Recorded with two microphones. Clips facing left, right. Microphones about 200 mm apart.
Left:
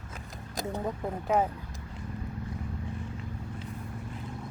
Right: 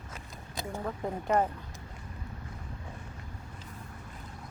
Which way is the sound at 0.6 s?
15° left (ahead or behind).